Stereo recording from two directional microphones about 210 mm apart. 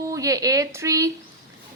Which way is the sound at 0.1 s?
15° right (ahead or behind).